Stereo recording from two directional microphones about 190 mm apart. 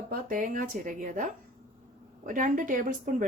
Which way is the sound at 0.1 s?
45° right (ahead or behind).